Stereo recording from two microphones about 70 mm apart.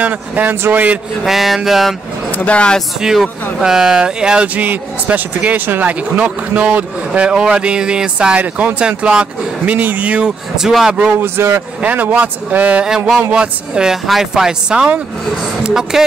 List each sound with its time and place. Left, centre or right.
0.0 s speech: right
1.2 s a sound: centre
2.3 s speech: centre
3.0 s speech: centre
10.6 s a sound: centre
11.1 s a man's voice: right
11.8 s speech: right; by 16.0 s centre